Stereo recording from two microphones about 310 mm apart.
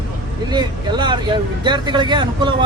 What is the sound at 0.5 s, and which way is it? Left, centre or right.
Speech, centre.